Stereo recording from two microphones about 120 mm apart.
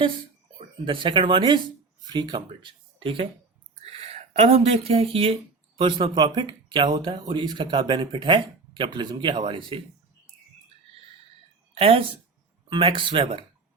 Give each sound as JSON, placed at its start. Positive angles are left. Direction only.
{"t": 0.9, "sound": "speech", "side_deg": -45}
{"t": 4.0, "sound": "speech", "side_deg": -65}
{"t": 11.7, "sound": "speech", "side_deg": -55}